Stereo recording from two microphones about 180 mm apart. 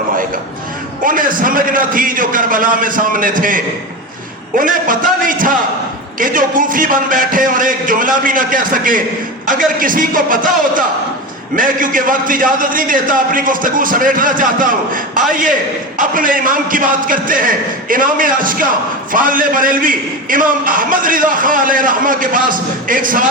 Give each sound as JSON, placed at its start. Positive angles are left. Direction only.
{"t": 1.0, "sound": "a man's voice", "side_deg": -50}